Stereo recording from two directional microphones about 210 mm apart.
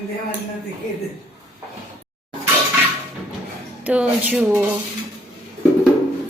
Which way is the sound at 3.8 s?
5° right (ahead or behind).